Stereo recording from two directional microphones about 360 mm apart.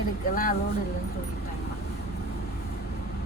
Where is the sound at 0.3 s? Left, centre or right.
Left.